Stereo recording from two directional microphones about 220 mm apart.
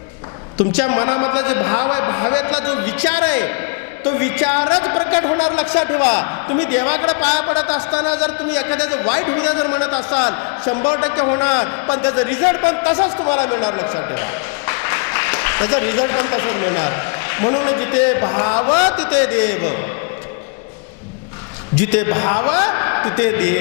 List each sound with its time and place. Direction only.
0.8 s a man's voice: 20° left (ahead or behind)
7.9 s a man's voice: 30° left (ahead or behind)
8.2 s a man's voice: 10° left (ahead or behind)
13.2 s a man's voice: 30° left (ahead or behind)
13.5 s a man's voice: 20° left (ahead or behind)
19.0 s a man's voice: 15° left (ahead or behind)
21.9 s a man's voice: 15° left (ahead or behind)